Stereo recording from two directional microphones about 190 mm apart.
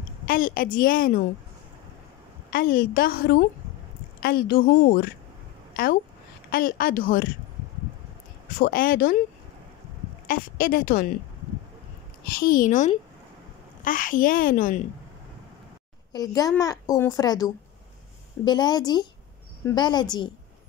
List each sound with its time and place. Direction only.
0.3 s a woman's voice: 45° left (ahead or behind)
2.5 s a woman's voice: 50° left (ahead or behind)
6.5 s a woman's voice: 50° left (ahead or behind)
8.5 s a woman's voice: 50° left (ahead or behind)
10.2 s a woman's voice: 50° left (ahead or behind)
12.4 s a woman's voice: 45° left (ahead or behind)
16.1 s a woman's voice: 20° left (ahead or behind)